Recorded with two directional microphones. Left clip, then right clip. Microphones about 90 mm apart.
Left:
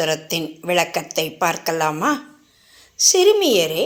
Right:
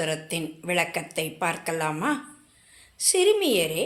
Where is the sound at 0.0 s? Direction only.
35° left (ahead or behind).